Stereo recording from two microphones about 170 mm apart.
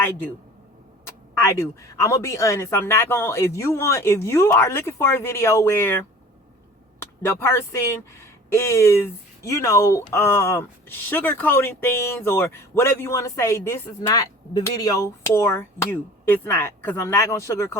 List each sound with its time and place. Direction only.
1.4 s speech: 15° left (ahead or behind)
7.0 s speech: 15° left (ahead or behind)